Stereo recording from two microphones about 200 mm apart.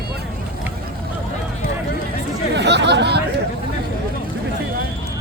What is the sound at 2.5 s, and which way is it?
Chatter, 60° right (ahead or behind).